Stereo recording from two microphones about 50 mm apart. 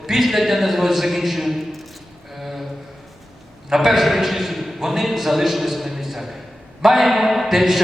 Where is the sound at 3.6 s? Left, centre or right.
Centre.